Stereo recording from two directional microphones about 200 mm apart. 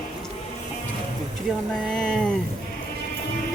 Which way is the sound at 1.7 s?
5° left (ahead or behind).